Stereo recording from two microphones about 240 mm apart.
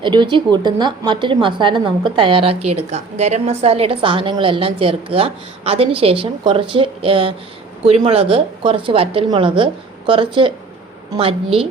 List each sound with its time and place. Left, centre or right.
0.0 s a woman's voice: centre